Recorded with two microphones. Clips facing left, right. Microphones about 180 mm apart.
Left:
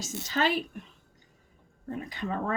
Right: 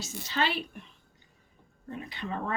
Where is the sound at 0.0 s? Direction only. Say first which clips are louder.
Left 2 dB; 45° left (ahead or behind).